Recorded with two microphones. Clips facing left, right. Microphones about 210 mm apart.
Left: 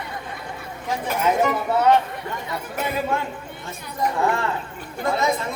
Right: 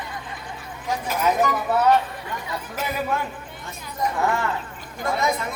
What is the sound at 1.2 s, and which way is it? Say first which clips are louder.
Speech: left 1 dB; 25° left (ahead or behind).